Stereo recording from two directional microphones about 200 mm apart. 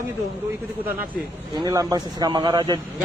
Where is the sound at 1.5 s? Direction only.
20° right (ahead or behind).